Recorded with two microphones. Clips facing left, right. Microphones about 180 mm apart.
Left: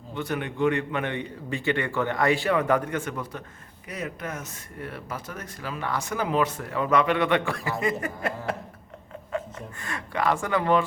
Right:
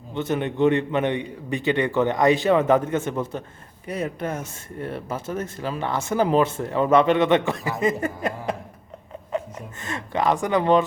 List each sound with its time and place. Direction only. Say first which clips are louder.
0.1 s speech: right 5 dB; 25° right (ahead or behind)
9.8 s speech: right 3 dB; 25° right (ahead or behind)